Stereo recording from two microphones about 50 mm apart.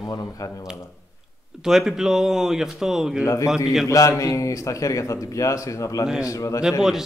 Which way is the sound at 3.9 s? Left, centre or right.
Left.